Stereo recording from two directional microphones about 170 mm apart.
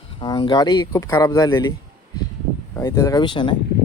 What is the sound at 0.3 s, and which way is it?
Speech, 25° left (ahead or behind).